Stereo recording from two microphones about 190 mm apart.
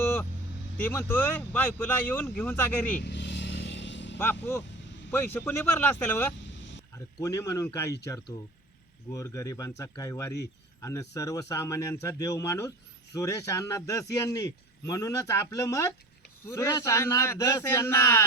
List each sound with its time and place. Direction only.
0.8 s speech: 10° left (ahead or behind)
3.0 s vehicle: 65° left (ahead or behind)
4.2 s speech: 10° left (ahead or behind)
9.1 s speech: 15° left (ahead or behind)